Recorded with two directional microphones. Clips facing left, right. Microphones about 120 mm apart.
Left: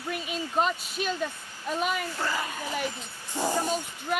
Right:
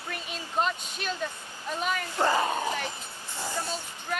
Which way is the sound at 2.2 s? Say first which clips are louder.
Right 6 dB; 30° right (ahead or behind).